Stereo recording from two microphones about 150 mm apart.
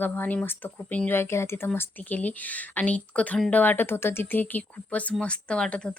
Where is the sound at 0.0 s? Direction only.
10° left (ahead or behind).